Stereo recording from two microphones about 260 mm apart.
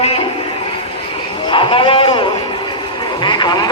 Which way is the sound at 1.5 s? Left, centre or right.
Centre.